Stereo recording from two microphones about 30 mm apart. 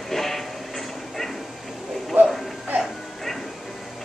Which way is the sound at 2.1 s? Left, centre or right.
Right.